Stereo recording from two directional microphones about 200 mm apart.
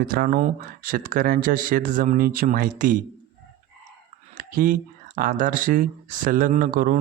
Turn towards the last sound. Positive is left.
turn(degrees=-45)  # may be behind; listen again after turning